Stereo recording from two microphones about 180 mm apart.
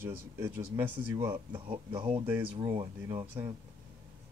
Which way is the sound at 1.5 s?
30° right (ahead or behind).